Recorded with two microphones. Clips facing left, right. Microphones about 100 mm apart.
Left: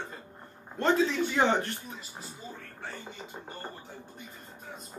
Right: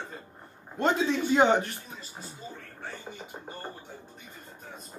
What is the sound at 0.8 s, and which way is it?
Speech, 20° right (ahead or behind).